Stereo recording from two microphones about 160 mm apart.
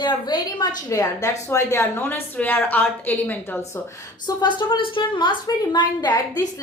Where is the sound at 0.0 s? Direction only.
30° left (ahead or behind).